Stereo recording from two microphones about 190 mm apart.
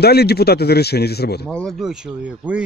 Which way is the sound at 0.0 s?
55° left (ahead or behind).